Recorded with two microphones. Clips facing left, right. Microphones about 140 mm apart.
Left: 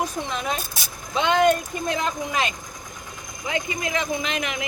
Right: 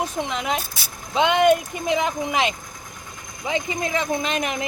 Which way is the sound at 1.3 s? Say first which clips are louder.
Even; 20° right (ahead or behind).